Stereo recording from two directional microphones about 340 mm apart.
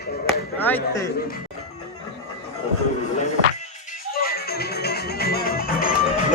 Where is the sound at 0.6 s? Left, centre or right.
Centre.